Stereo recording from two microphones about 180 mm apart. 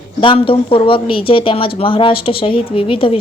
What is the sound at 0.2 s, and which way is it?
Speech, 30° left (ahead or behind).